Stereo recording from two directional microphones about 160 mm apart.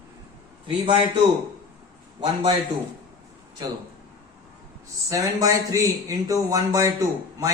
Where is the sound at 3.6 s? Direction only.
25° right (ahead or behind).